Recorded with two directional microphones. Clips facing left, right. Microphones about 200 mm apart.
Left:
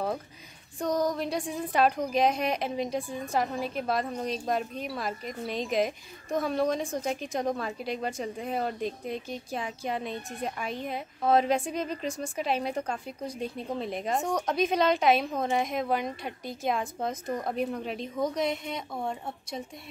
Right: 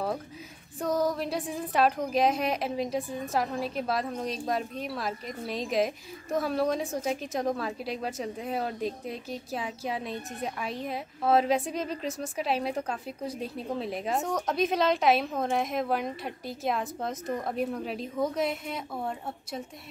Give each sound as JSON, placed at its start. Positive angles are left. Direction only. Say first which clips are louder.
{"t": 0.7, "sound": "a woman's voice", "louder": "even", "side_deg": -5}